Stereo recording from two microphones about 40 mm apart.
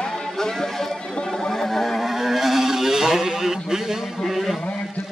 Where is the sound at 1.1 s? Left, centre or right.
Left.